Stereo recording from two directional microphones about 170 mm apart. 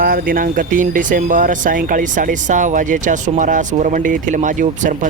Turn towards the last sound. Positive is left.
turn(degrees=-50)  # may be behind; listen again after turning